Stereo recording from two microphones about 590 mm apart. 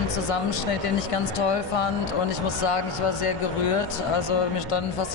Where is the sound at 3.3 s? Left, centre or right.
Left.